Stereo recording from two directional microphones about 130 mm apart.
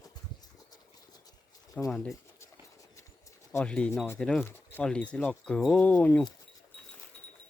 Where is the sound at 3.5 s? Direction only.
10° left (ahead or behind).